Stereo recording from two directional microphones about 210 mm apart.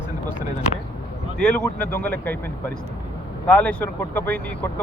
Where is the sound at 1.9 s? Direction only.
10° left (ahead or behind).